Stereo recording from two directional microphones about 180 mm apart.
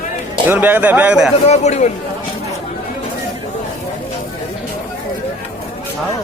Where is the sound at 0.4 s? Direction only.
10° right (ahead or behind).